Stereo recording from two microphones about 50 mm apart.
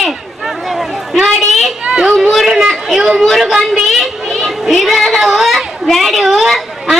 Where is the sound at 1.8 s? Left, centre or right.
Centre.